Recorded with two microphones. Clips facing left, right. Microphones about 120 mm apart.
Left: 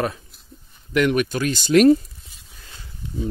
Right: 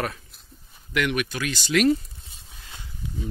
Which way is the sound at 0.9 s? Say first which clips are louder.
Left 6 dB; 35° left (ahead or behind).